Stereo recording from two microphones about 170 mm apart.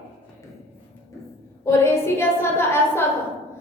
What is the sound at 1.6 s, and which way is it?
A woman's voice, 15° left (ahead or behind).